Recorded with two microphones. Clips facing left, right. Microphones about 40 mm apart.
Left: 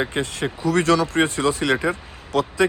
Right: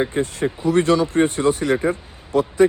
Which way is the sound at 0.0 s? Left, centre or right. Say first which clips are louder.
Right 3 dB; left.